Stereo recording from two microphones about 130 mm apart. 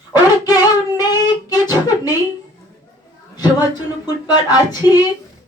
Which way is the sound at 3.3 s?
30° left (ahead or behind).